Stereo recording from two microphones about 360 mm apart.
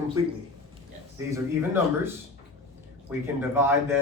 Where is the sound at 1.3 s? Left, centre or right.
Centre.